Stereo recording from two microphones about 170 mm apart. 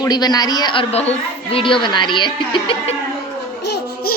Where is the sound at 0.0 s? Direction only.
25° left (ahead or behind).